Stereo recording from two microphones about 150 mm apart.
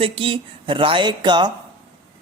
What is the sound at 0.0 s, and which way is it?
Speech, 35° right (ahead or behind).